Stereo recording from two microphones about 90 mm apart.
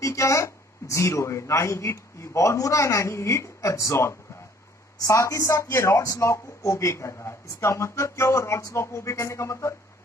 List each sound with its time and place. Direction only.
0.0 s speech: 35° left (ahead or behind)